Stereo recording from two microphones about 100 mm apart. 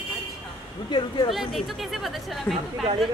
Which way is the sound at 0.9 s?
50° left (ahead or behind).